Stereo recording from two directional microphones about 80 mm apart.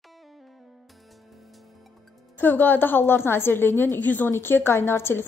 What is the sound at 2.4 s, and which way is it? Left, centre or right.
A woman's voice, left.